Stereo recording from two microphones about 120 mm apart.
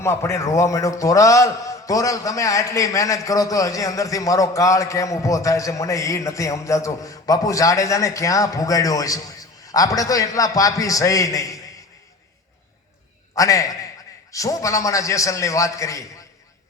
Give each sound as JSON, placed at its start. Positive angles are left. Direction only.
{"t": 0.0, "sound": "a man's voice", "side_deg": 20}
{"t": 13.3, "sound": "a man's voice", "side_deg": 30}